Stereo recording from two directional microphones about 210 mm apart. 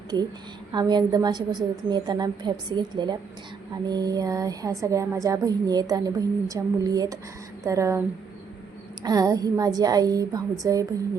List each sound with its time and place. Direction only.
0.7 s a woman's voice: 20° right (ahead or behind)
9.0 s speech: 15° right (ahead or behind)